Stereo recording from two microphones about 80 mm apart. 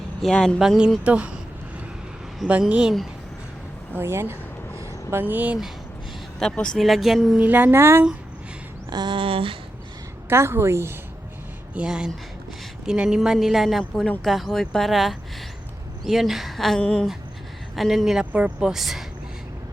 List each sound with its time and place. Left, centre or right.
0.2 s speech: centre
1.0 s speech: centre
2.5 s speech: centre
3.9 s a sound: right
5.2 s speech: right
6.4 s a woman's voice: centre
7.3 s speech: right
8.9 s a sound: right
10.2 s a woman's voice: right
11.7 s a woman's voice: centre
17.7 s a woman's voice: centre
18.3 s speech: centre
18.7 s a woman's voice: centre